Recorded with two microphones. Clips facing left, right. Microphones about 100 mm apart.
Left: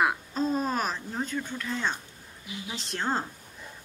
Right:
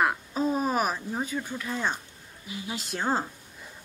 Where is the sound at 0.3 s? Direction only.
10° right (ahead or behind).